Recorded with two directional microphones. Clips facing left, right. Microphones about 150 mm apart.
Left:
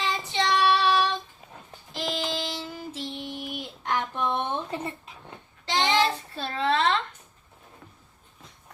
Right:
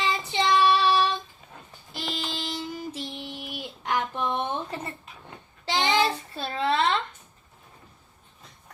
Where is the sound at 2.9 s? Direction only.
10° right (ahead or behind).